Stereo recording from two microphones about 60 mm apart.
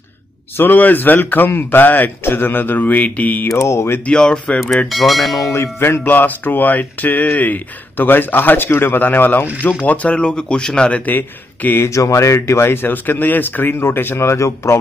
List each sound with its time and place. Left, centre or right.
0.6 s speech: left
3.4 s speech: left
4.0 s speech: centre
4.8 s bell: centre
5.5 s speech: left
10.0 s a man's voice: centre
11.9 s speech: left